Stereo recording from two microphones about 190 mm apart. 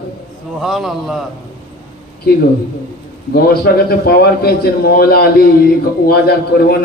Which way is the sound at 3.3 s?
55° left (ahead or behind).